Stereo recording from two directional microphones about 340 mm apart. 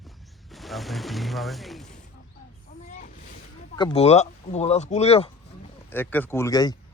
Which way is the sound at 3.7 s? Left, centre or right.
Centre.